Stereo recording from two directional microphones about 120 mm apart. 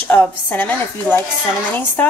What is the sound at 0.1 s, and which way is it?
A woman's voice, 15° left (ahead or behind).